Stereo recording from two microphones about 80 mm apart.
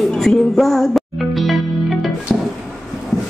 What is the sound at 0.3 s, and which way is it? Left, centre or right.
Music, centre.